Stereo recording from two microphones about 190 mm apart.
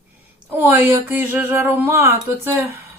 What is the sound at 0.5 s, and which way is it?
Speech, 10° right (ahead or behind).